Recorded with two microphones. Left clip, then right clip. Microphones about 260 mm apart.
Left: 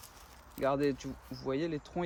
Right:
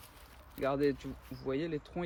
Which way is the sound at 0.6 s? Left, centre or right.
Left.